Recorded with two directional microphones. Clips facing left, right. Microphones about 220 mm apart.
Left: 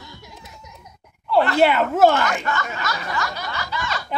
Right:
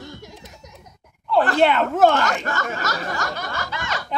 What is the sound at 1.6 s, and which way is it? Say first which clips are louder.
Speech: left 1 dB; 5° left (ahead or behind).